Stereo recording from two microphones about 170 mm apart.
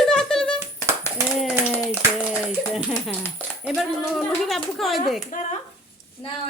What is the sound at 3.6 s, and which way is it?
Speech, centre (ahead or behind).